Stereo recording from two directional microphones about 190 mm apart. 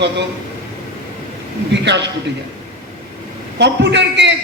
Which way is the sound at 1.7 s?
65° right (ahead or behind).